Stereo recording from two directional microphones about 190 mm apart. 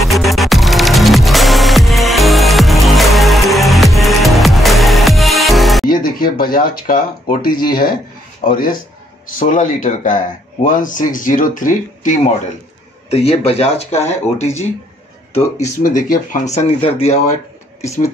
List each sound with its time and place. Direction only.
0.0 s music: centre (ahead or behind)
5.9 s speech: 50° left (ahead or behind)
16.5 s speech: 30° left (ahead or behind)